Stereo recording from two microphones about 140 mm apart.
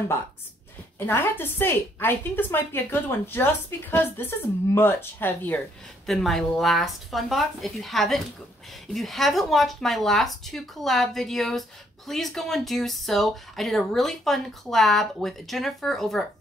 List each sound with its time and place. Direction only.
0.9 s a woman's voice: 15° left (ahead or behind)
6.0 s speech: centre (ahead or behind)